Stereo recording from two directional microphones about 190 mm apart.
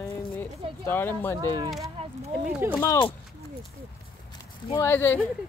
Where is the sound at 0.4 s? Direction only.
10° left (ahead or behind).